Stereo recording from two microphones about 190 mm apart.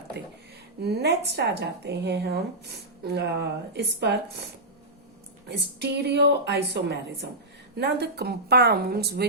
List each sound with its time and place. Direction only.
0.2 s speech: 60° right (ahead or behind)
5.5 s speech: 60° right (ahead or behind)